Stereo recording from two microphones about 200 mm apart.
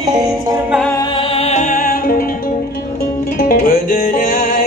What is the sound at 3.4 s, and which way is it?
Music, 45° left (ahead or behind).